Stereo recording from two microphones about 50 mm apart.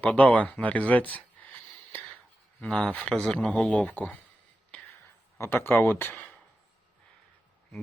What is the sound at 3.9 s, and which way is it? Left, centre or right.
Speech, left.